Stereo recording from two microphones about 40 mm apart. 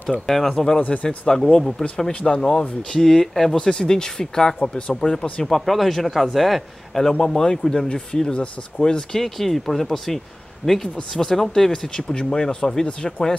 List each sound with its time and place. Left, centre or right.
0.3 s speech: centre
0.7 s speech: left
1.0 s speech: centre
4.6 s speech: left
5.7 s a man's voice: centre
7.1 s speech: centre
7.9 s speech: left; by 10.9 s centre
11.0 s speech: centre